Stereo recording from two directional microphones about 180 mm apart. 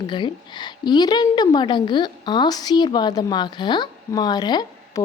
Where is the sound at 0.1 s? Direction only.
25° left (ahead or behind).